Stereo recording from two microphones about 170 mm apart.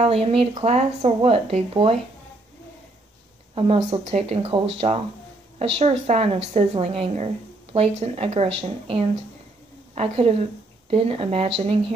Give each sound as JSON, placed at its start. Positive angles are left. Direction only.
{"t": 0.0, "sound": "speech", "side_deg": -35}
{"t": 3.5, "sound": "speech", "side_deg": -35}